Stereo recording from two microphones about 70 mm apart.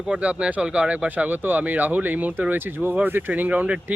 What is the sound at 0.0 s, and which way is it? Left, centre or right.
Speech, centre.